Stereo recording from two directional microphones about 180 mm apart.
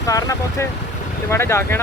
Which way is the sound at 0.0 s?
20° left (ahead or behind).